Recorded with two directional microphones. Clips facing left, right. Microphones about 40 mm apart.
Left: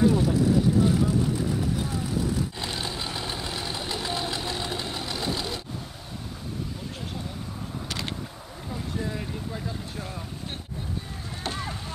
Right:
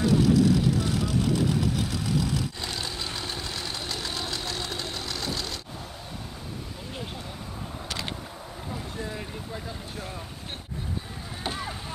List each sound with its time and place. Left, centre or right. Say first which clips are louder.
0.2 s vehicle: right 1 dB; right
2.6 s vehicle: left 2 dB; centre
3.2 s engine knocking: left 2 dB; centre
8.9 s a sound: left 3 dB; centre
11.4 s vehicle: even; centre